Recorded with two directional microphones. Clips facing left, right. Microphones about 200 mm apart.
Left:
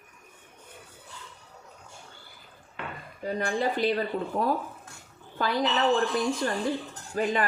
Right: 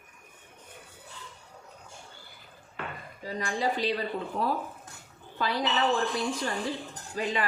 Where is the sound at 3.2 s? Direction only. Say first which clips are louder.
Left 3 dB; 55° left (ahead or behind).